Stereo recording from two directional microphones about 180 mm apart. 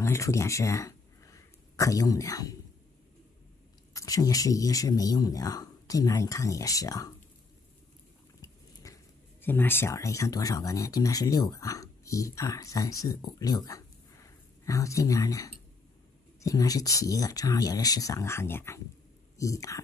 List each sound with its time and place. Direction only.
0.0 s speech: 15° left (ahead or behind)
3.9 s speech: 20° left (ahead or behind)
8.4 s speech: 20° left (ahead or behind)